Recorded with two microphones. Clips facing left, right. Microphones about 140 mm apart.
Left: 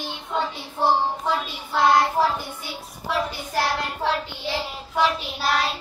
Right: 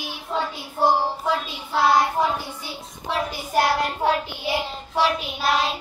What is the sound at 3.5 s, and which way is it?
Child singing, 15° right (ahead or behind).